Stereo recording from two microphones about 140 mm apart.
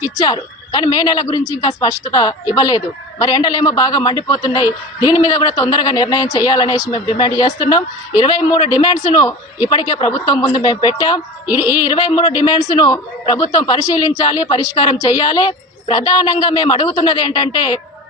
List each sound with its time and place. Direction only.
0.0 s a man's voice: 25° left (ahead or behind)